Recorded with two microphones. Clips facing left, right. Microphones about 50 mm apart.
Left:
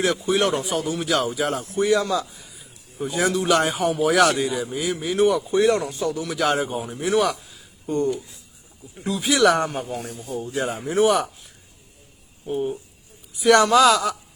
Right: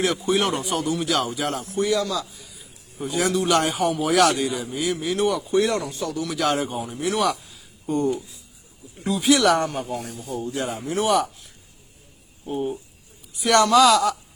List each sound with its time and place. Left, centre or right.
0.0 s a man's voice: centre
1.8 s speech: centre
2.4 s a man's voice: centre
11.0 s speech: centre
12.5 s a man's voice: centre